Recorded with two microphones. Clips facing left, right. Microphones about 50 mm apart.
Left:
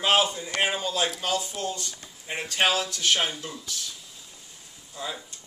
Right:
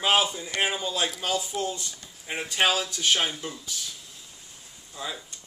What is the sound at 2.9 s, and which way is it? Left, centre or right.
Speech, centre.